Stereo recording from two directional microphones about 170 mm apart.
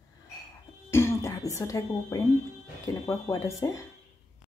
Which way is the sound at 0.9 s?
15° left (ahead or behind).